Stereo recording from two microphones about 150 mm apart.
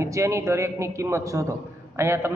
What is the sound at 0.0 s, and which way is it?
A man's voice, 20° right (ahead or behind).